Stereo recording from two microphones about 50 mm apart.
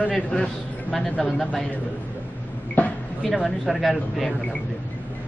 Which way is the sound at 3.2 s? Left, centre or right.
Centre.